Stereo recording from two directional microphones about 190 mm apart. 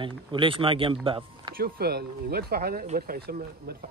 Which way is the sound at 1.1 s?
25° right (ahead or behind).